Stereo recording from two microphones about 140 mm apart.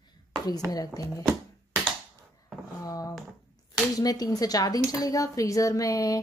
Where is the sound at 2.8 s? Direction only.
25° left (ahead or behind).